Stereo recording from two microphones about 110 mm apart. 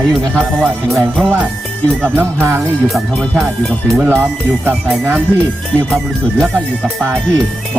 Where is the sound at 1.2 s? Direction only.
10° right (ahead or behind).